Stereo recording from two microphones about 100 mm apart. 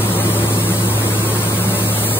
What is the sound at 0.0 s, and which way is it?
Vehicle, 20° left (ahead or behind).